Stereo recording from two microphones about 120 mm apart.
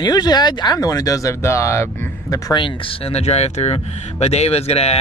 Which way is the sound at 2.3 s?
40° left (ahead or behind).